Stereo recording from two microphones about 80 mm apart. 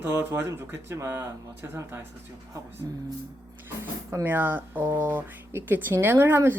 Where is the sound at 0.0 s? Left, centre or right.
Right.